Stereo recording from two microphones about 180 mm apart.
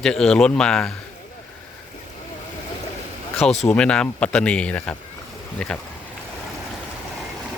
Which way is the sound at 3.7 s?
5° left (ahead or behind).